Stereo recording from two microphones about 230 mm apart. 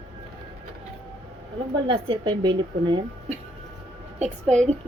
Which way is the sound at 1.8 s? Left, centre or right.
Right.